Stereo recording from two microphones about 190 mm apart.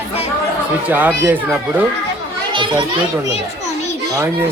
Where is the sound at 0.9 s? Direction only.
10° right (ahead or behind).